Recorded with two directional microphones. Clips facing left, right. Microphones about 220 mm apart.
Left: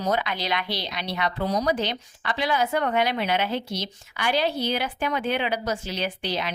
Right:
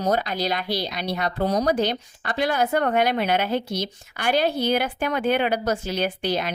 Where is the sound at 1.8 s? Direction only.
45° right (ahead or behind).